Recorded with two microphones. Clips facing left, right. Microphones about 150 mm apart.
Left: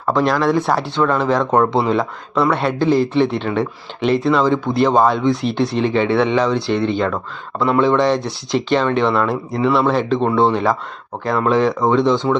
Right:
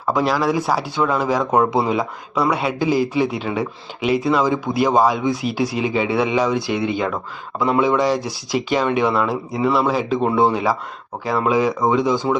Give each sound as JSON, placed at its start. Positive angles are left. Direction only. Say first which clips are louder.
{"t": 0.1, "sound": "a man's voice", "louder": "left 3 dB", "side_deg": -5}
{"t": 7.9, "sound": "a man's voice", "louder": "left 2 dB", "side_deg": -5}